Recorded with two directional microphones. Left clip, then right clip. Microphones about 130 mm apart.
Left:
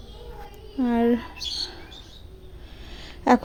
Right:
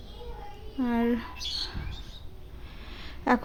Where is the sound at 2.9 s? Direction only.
25° left (ahead or behind).